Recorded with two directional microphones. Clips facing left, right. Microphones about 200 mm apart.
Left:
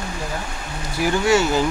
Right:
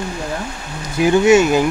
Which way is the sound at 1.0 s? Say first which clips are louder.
Right 7 dB; 20° right (ahead or behind).